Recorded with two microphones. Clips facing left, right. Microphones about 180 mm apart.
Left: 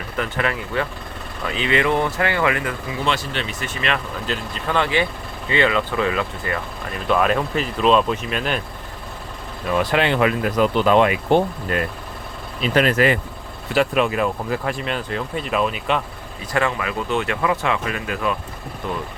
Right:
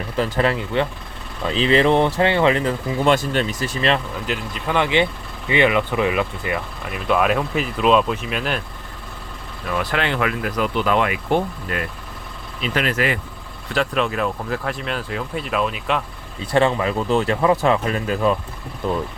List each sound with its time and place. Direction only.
0.2 s speech: 30° right (ahead or behind)
3.0 s speech: 45° right (ahead or behind)
4.3 s speech: 15° right (ahead or behind)
9.7 s speech: 20° left (ahead or behind)
12.6 s speech: 40° left (ahead or behind)
13.7 s speech: 10° left (ahead or behind)
16.5 s speech: 30° right (ahead or behind)